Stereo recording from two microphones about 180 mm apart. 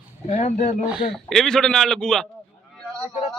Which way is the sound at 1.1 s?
Centre (ahead or behind).